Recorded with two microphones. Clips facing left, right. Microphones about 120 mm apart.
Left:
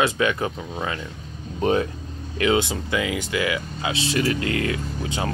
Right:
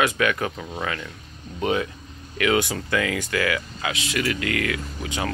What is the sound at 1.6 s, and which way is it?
Speech, 35° left (ahead or behind).